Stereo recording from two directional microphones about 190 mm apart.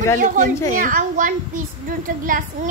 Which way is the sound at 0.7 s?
45° right (ahead or behind).